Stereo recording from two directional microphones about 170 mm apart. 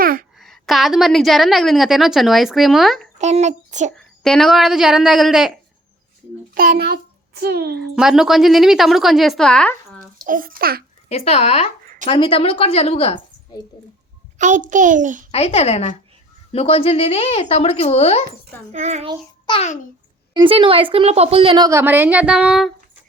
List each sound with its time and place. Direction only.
0.0 s a sound: 55° right (ahead or behind)
0.3 s a woman's voice: centre (ahead or behind)
3.2 s a child's voice: 40° right (ahead or behind)
3.9 s a woman's voice: centre (ahead or behind)
6.5 s a child's voice: 60° right (ahead or behind)
7.8 s a woman's voice: 5° right (ahead or behind)
10.2 s a child's voice: 55° right (ahead or behind)
11.1 s speech: 35° left (ahead or behind)
14.3 s a child's voice: 45° right (ahead or behind)
15.3 s speech: 35° left (ahead or behind)
18.7 s a child's voice: 40° right (ahead or behind)
19.5 s speech: 35° left (ahead or behind)
20.3 s speech: 30° right (ahead or behind); by 22.7 s 5° right (ahead or behind)